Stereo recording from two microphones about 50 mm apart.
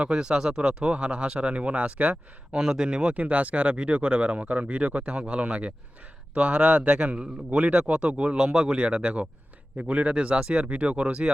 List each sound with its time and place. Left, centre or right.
0.0 s a man's voice: centre
2.5 s speech: centre
3.2 s a man's voice: right